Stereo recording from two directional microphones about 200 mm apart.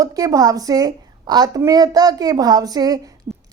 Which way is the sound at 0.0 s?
15° right (ahead or behind).